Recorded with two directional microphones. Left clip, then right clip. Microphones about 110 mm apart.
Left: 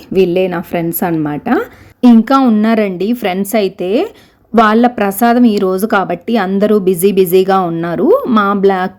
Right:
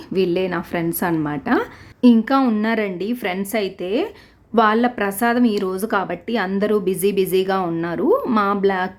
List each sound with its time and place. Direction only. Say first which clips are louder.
0.1 s a woman's voice: left 8 dB; 25° left (ahead or behind)
2.0 s a woman's voice: left 7 dB; 45° left (ahead or behind)
2.4 s a woman's voice: left 8 dB; 30° left (ahead or behind)
2.6 s a woman's voice: left 8 dB; 45° left (ahead or behind)